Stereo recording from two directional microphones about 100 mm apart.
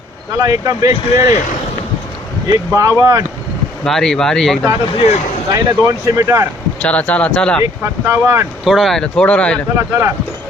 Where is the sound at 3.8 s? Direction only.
5° left (ahead or behind).